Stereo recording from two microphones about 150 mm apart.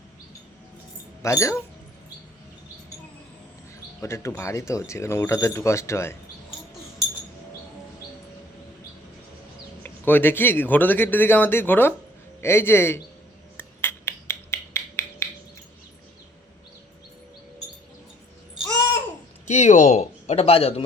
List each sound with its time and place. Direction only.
1.2 s speech: 20° left (ahead or behind)
4.0 s speech: 20° left (ahead or behind)
9.8 s speech: 15° left (ahead or behind)
13.6 s a sound: 15° left (ahead or behind)
19.5 s speech: 55° left (ahead or behind)